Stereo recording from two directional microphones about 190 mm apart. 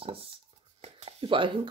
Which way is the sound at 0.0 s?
30° right (ahead or behind).